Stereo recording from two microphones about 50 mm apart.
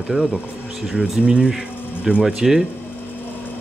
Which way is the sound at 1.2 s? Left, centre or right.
Right.